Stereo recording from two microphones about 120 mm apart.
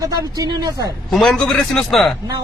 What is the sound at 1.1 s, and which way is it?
A man's voice, 5° left (ahead or behind).